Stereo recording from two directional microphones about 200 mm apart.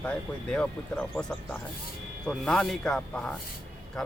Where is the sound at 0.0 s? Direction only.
5° left (ahead or behind).